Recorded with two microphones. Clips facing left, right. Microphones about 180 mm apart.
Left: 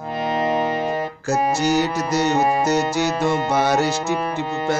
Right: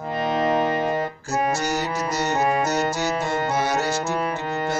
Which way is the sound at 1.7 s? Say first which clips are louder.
Left 6 dB; 75° left (ahead or behind).